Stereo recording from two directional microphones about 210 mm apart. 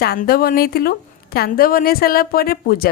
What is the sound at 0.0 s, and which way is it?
A woman's voice, 45° left (ahead or behind).